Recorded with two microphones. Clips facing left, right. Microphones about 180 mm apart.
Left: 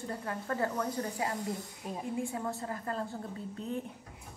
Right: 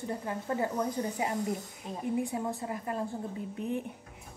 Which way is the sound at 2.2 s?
20° right (ahead or behind).